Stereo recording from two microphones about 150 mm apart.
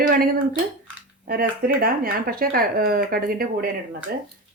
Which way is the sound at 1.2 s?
75° right (ahead or behind).